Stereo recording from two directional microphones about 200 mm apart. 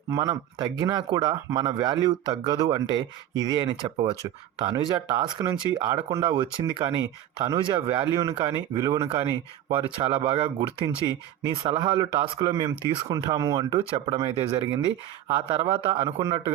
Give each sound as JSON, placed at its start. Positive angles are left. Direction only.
{"t": 0.1, "sound": "speech", "side_deg": -20}
{"t": 9.0, "sound": "speech", "side_deg": -30}